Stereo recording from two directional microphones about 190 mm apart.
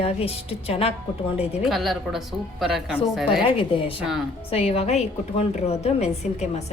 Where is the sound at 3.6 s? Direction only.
30° left (ahead or behind).